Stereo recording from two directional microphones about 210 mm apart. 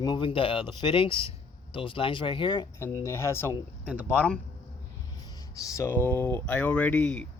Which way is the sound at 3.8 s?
10° right (ahead or behind).